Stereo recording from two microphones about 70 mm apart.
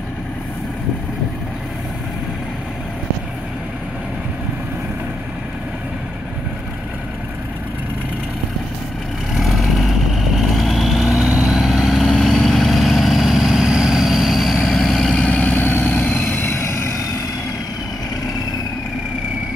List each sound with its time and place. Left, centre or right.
9.3 s vehicle: centre
15.2 s vehicle: left